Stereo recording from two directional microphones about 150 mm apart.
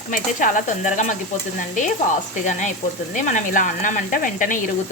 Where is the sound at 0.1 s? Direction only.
60° left (ahead or behind).